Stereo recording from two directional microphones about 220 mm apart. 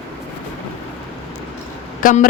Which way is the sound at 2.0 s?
40° left (ahead or behind).